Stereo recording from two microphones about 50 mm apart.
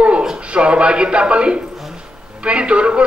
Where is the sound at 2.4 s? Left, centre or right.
Right.